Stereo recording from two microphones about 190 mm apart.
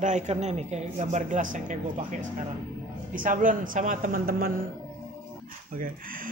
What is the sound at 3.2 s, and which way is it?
A man's voice, 45° right (ahead or behind).